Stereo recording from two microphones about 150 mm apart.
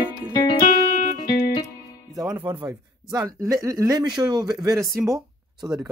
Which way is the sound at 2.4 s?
30° right (ahead or behind).